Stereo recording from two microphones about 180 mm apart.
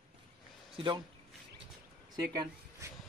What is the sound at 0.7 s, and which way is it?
Speech, 25° right (ahead or behind).